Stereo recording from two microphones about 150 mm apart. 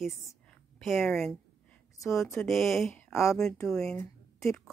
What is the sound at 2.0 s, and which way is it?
Speech, 20° left (ahead or behind).